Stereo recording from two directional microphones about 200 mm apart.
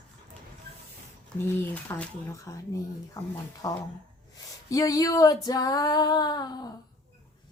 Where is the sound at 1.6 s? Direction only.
10° left (ahead or behind).